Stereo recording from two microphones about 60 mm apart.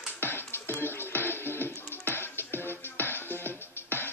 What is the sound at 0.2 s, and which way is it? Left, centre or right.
Music, left.